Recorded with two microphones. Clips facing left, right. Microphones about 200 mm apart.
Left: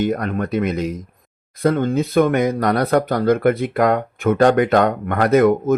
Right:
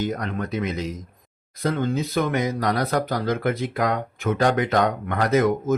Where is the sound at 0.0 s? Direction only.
60° left (ahead or behind).